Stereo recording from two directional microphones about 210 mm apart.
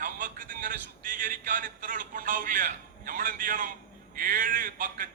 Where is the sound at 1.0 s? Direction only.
40° right (ahead or behind).